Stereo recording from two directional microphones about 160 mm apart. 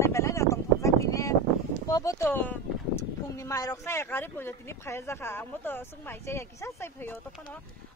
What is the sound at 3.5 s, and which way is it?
Speech, 20° left (ahead or behind).